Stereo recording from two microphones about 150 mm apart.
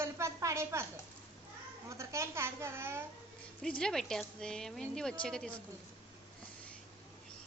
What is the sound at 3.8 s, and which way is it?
A woman's voice, 5° left (ahead or behind).